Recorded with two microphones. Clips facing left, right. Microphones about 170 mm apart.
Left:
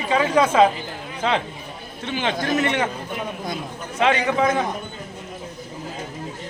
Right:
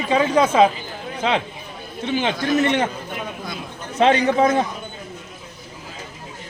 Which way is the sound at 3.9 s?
35° right (ahead or behind).